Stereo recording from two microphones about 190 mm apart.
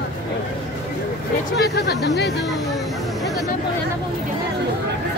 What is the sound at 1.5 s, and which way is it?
Speech, 60° left (ahead or behind).